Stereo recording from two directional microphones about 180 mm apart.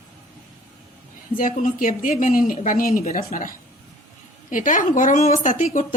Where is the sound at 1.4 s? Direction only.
50° left (ahead or behind).